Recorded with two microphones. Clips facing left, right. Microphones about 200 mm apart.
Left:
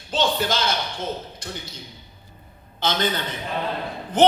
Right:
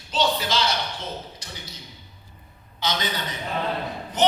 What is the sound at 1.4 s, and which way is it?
Speech, 55° left (ahead or behind).